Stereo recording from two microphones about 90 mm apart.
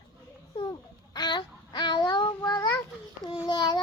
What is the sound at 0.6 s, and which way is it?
Babbling, 50° left (ahead or behind).